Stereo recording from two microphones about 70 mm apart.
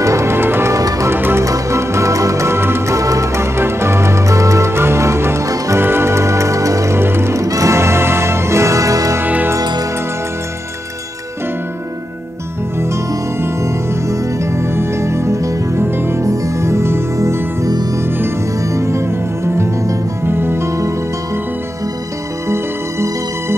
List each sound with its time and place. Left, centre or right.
0.0 s music: right
0.7 s music: right
1.1 s music: right
1.4 s music: right
3.0 s music: right
7.0 s music: right
7.4 s music: right
9.2 s music: right
9.6 s music: right
14.0 s music: right
18.7 s music: right